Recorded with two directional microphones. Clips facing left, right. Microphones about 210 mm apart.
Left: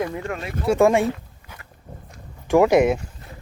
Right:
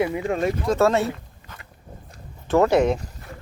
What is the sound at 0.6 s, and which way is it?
Speech, 10° left (ahead or behind).